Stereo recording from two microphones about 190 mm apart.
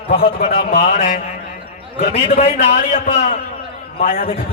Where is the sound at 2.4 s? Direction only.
35° left (ahead or behind).